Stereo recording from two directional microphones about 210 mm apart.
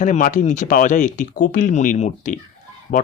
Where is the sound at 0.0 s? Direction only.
35° left (ahead or behind).